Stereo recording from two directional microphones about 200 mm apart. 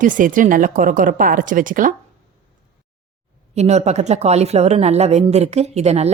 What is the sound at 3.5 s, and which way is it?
Speech, 35° right (ahead or behind).